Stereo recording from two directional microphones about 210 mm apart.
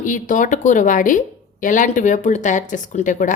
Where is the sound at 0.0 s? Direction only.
40° left (ahead or behind).